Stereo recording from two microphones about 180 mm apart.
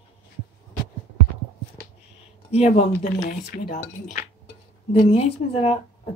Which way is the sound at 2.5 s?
35° left (ahead or behind).